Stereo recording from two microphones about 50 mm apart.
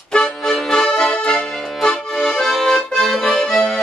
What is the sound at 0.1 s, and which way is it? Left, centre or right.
Accordion, centre.